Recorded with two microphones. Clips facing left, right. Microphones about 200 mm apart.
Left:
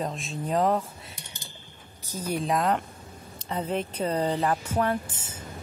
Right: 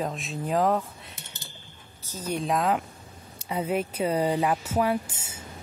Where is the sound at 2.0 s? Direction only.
10° left (ahead or behind).